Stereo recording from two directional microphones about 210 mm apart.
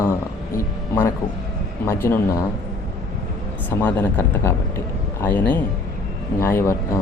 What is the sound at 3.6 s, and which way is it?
Speech, 10° left (ahead or behind).